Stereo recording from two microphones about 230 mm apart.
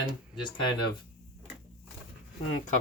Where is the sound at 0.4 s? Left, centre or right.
Centre.